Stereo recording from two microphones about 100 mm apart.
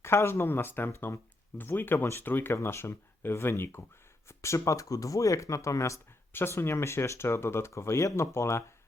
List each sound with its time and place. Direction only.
0.0 s speech: 25° left (ahead or behind)